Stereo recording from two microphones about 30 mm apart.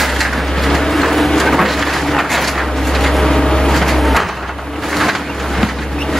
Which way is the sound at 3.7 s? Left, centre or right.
Centre.